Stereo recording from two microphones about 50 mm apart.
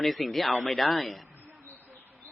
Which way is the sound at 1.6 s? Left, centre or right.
Left.